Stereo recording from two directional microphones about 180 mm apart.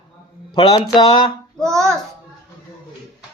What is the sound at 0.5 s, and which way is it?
Speech, 25° left (ahead or behind).